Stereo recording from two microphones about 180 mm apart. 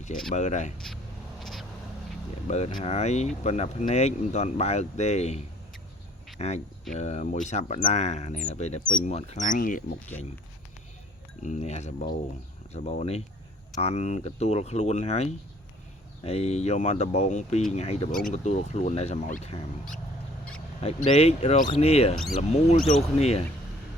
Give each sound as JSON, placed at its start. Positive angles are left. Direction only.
{"t": 0.3, "sound": "speech", "side_deg": 40}
{"t": 1.4, "sound": "a sound", "side_deg": 0}
{"t": 2.5, "sound": "speech", "side_deg": 35}
{"t": 6.4, "sound": "speech", "side_deg": 35}
{"t": 11.4, "sound": "speech", "side_deg": 40}
{"t": 20.8, "sound": "speech", "side_deg": 35}
{"t": 22.1, "sound": "speech", "side_deg": 0}
{"t": 22.4, "sound": "speech", "side_deg": 35}